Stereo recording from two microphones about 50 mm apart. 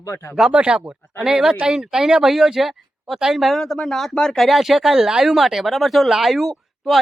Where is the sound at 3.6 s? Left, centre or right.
Centre.